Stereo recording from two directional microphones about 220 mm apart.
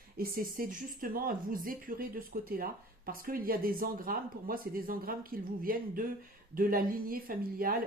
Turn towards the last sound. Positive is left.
turn(degrees=-40)  # may be behind; listen again after turning